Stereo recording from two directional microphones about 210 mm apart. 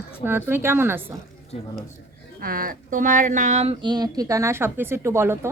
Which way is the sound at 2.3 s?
45° right (ahead or behind).